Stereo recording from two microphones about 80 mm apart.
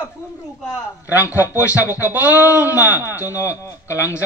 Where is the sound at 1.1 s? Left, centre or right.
Right.